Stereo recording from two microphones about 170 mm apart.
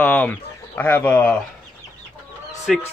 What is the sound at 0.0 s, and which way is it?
Speech, 10° left (ahead or behind).